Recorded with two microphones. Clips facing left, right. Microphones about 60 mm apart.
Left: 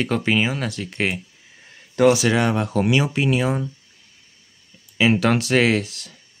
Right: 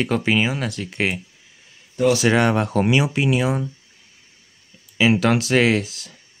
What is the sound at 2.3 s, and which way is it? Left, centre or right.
Speech, right.